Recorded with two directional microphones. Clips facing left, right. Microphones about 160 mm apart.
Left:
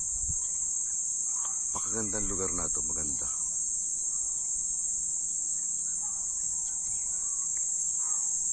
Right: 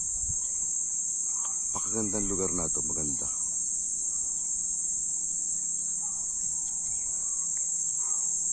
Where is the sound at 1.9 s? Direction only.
15° right (ahead or behind).